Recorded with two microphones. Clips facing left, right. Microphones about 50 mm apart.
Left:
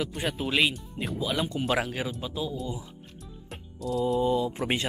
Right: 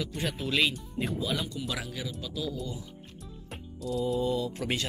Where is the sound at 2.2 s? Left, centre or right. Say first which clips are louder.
Left 2 dB; left.